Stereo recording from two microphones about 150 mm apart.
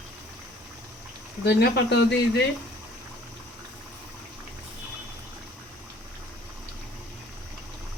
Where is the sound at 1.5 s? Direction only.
90° left.